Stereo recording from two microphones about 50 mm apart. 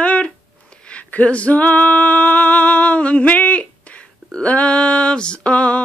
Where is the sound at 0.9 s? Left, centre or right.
Left.